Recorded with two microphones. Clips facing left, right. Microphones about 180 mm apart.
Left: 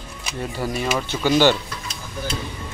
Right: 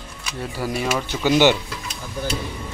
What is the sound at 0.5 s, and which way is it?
Speech, 10° right (ahead or behind).